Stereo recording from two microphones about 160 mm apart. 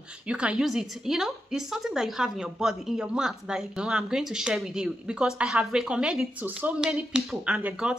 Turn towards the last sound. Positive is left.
turn(degrees=-5)  # may be behind; listen again after turning